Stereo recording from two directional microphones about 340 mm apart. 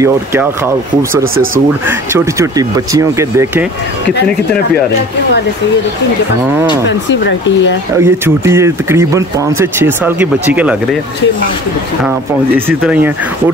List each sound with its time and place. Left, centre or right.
0.0 s speech: centre
1.3 s speech: right
1.9 s speech: centre
6.9 s speech: left
8.0 s speech: centre
12.5 s speech: centre